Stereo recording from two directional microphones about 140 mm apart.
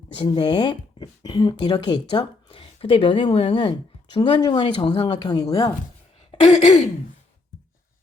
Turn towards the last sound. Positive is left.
turn(degrees=50)  # may be behind; listen again after turning